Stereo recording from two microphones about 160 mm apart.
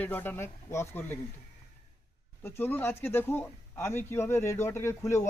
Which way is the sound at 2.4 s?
15° left (ahead or behind).